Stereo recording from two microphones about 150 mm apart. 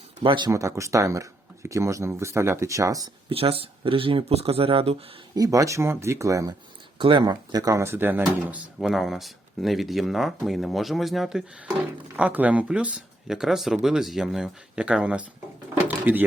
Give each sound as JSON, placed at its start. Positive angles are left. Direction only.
{"t": 0.2, "sound": "speech", "side_deg": -35}
{"t": 0.5, "sound": "speech", "side_deg": -20}
{"t": 3.2, "sound": "speech", "side_deg": -40}
{"t": 5.3, "sound": "speech", "side_deg": -25}
{"t": 7.0, "sound": "speech", "side_deg": -35}